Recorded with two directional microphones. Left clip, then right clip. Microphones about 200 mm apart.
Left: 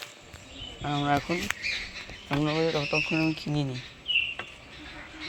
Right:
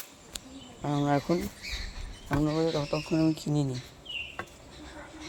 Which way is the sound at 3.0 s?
Centre (ahead or behind).